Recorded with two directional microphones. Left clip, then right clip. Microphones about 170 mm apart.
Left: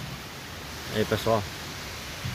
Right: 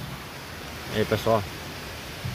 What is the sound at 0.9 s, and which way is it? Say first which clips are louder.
Speech: right 2 dB; centre (ahead or behind).